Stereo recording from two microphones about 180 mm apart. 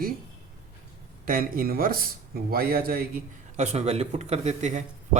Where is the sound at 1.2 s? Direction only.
55° right (ahead or behind).